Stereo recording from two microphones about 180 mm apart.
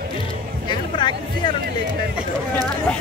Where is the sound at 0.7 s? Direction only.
25° left (ahead or behind).